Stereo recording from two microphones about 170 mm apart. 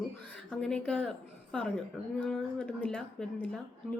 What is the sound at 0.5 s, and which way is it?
A woman's voice, 5° left (ahead or behind).